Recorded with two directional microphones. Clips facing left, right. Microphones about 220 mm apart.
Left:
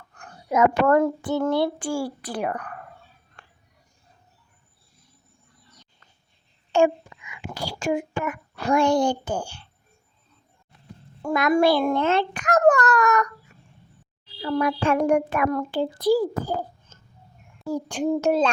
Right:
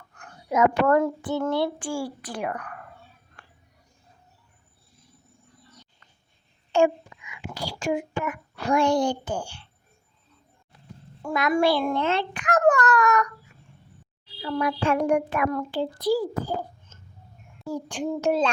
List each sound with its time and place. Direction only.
0.5 s a child's voice: 50° left (ahead or behind)
6.7 s speech: 50° left (ahead or behind)
11.2 s a child's voice: 45° left (ahead or behind)
14.4 s a child's voice: 50° left (ahead or behind)